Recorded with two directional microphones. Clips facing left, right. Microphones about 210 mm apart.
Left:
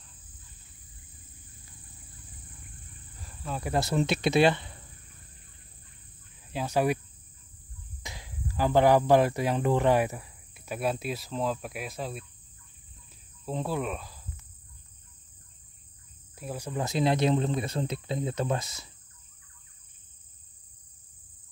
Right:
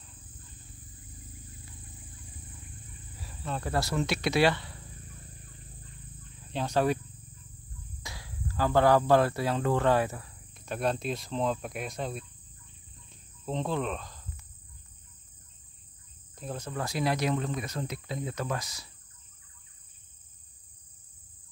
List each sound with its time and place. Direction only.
3.2 s insect: centre (ahead or behind)
3.6 s speech: 20° left (ahead or behind)
6.5 s speech: 10° left (ahead or behind)
8.0 s speech: 20° left (ahead or behind); by 12.3 s 5° left (ahead or behind)
13.5 s speech: 5° left (ahead or behind)
16.3 s speech: 10° left (ahead or behind); by 18.9 s 25° left (ahead or behind)